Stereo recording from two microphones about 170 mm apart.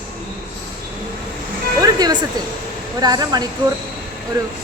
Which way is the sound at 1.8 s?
25° right (ahead or behind).